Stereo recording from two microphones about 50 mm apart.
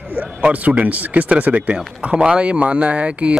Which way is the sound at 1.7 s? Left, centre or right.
Centre.